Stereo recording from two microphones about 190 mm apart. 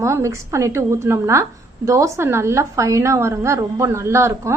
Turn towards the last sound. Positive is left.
turn(degrees=-15)  # may be behind; listen again after turning